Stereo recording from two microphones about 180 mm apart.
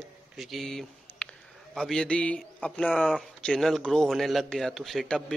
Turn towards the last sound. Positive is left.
turn(degrees=5)  # may be behind; listen again after turning